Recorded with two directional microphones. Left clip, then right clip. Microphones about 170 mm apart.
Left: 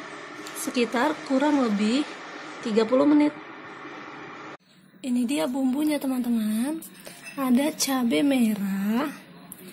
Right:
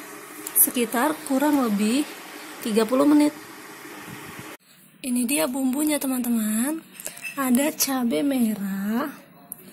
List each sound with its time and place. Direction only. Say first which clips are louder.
0.7 s speech: even; 10° right (ahead or behind)
5.0 s a woman's voice: right 2 dB; 5° left (ahead or behind)